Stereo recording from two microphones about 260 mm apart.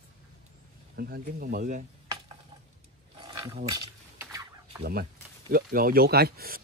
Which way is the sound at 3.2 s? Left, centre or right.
Centre.